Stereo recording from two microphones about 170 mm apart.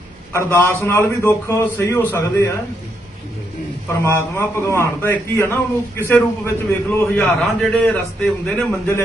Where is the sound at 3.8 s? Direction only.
15° left (ahead or behind).